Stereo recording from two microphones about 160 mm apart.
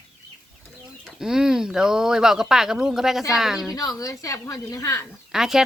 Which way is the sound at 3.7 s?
20° left (ahead or behind).